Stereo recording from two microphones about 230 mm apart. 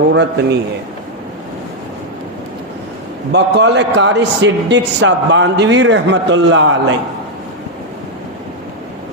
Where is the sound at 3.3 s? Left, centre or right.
Right.